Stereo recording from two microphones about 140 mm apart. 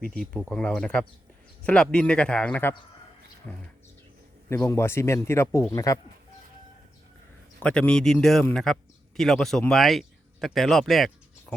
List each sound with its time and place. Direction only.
0.1 s a man's voice: 5° left (ahead or behind); by 6.0 s 25° left (ahead or behind)
7.6 s speech: 5° left (ahead or behind)